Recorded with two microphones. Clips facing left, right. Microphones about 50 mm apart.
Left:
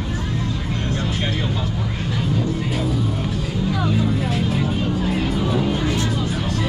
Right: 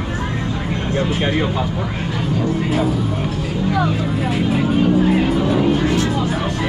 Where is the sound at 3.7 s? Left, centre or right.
Centre.